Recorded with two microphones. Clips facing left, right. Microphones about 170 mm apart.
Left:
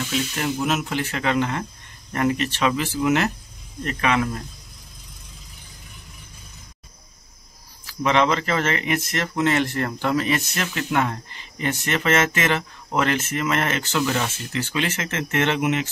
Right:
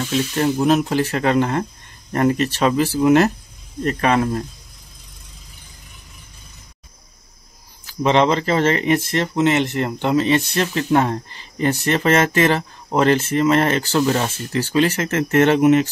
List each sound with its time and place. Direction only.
0.4 s speech: 35° right (ahead or behind)
7.8 s speech: 30° right (ahead or behind)